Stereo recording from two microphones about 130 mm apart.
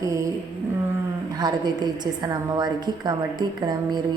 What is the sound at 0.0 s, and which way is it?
Music, 25° right (ahead or behind).